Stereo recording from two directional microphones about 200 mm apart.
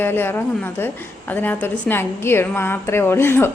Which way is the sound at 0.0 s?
10° left (ahead or behind).